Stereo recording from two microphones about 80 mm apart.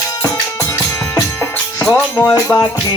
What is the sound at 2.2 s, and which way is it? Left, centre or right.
Music, left.